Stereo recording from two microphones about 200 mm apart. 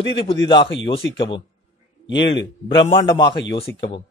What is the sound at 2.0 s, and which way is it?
Speech, 65° left (ahead or behind).